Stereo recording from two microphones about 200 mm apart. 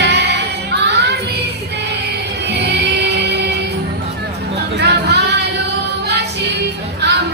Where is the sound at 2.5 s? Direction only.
55° right (ahead or behind).